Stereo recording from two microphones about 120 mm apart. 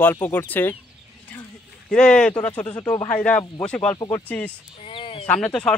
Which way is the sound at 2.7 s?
30° left (ahead or behind).